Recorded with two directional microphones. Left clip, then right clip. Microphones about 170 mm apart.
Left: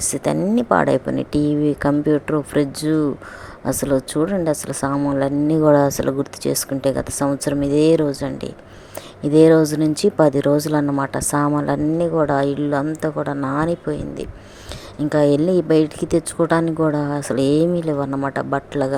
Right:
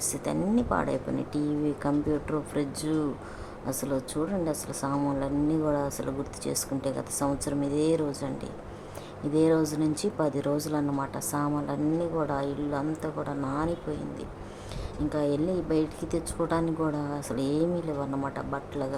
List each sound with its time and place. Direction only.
0.0 s speech: 40° left (ahead or behind)
15.1 s speech: 45° left (ahead or behind)